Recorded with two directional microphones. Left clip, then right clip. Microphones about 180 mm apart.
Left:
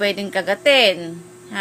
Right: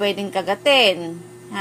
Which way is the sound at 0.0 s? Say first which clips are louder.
Left 1 dB; 15° left (ahead or behind).